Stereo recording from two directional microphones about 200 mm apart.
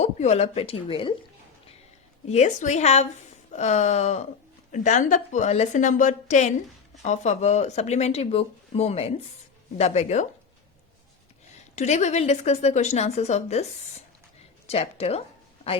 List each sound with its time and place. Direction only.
0.0 s a woman's voice: 35° left (ahead or behind)
2.2 s speech: 35° left (ahead or behind)
11.7 s speech: 35° left (ahead or behind)
14.7 s speech: 30° left (ahead or behind)